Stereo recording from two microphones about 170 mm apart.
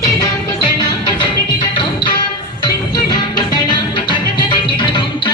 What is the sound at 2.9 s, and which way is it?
Music, 25° left (ahead or behind).